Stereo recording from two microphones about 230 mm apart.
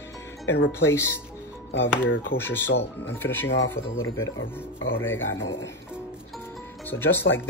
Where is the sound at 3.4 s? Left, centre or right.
Left.